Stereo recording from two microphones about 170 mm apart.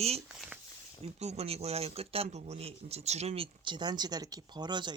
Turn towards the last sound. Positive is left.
turn(degrees=-25)  # may be behind; listen again after turning